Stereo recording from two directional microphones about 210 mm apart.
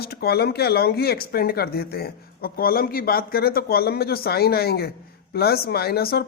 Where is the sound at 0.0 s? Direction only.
50° left (ahead or behind).